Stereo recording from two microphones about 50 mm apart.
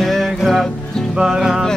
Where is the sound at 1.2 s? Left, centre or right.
Centre.